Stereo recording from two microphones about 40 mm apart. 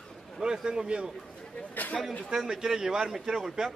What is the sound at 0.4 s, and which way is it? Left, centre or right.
Speech, centre.